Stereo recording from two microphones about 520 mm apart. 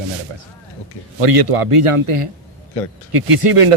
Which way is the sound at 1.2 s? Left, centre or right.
Right.